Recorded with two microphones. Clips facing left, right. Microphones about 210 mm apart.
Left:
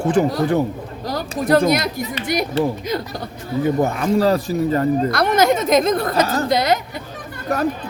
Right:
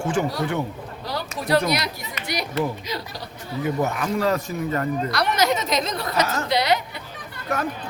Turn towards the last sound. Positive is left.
turn(degrees=35)  # may be behind; listen again after turning